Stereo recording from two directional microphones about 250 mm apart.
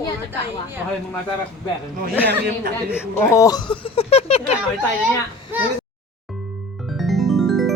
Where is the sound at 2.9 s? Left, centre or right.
Centre.